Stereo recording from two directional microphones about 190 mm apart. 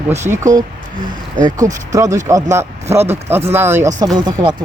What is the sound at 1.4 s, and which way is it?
Speech, 20° right (ahead or behind).